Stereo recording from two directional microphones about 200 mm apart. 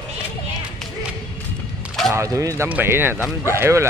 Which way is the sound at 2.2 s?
15° right (ahead or behind).